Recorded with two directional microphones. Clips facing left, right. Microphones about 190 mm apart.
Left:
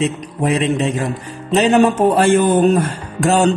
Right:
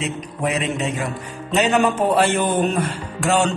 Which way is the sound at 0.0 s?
35° left (ahead or behind).